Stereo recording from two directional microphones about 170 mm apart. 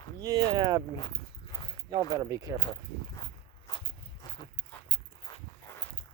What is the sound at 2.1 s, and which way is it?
Speech, 20° right (ahead or behind).